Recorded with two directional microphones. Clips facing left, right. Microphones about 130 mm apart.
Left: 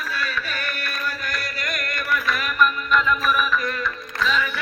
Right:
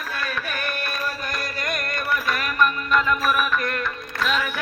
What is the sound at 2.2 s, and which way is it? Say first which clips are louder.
Music: left 1 dB; 45° right (ahead or behind).